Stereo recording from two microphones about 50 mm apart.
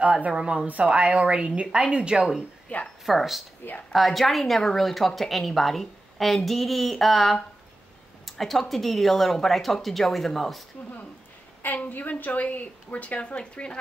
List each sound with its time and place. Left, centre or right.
0.0 s a woman's voice: right
0.4 s a woman's voice: centre
0.7 s a woman's voice: right
2.7 s a sound: left
3.1 s a woman's voice: centre
11.6 s a woman's voice: left